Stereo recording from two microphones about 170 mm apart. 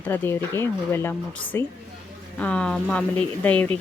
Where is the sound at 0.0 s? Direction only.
10° left (ahead or behind).